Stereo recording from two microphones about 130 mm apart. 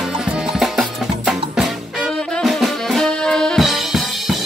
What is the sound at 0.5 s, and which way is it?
Music, centre (ahead or behind).